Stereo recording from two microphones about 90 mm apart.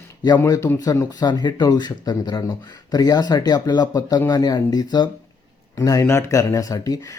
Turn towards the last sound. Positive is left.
turn(degrees=40)  # may be behind; listen again after turning